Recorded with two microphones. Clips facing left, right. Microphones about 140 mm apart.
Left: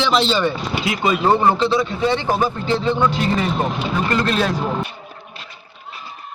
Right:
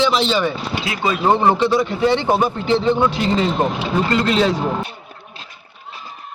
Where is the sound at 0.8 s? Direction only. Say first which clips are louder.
Left 2 dB; centre (ahead or behind).